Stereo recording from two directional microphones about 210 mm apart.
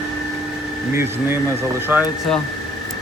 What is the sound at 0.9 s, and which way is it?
Speech, 10° right (ahead or behind).